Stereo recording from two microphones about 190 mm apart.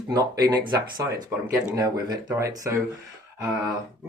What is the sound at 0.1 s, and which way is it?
Speech, 20° right (ahead or behind).